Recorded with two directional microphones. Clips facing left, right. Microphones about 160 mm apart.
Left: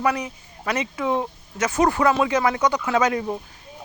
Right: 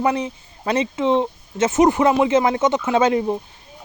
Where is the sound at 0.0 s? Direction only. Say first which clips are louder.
Right 3 dB; 25° right (ahead or behind).